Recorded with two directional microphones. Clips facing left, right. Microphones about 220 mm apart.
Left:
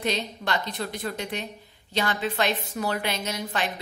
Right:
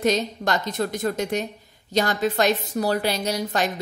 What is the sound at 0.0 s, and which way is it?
A woman's voice, 45° right (ahead or behind).